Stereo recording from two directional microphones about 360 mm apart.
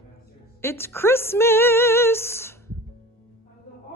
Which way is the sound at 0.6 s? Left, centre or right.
Centre.